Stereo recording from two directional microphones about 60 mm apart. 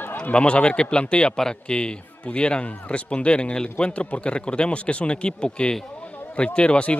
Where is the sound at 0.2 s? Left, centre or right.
Centre.